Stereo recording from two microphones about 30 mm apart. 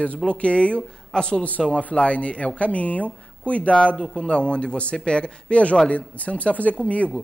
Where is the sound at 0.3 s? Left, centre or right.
Left.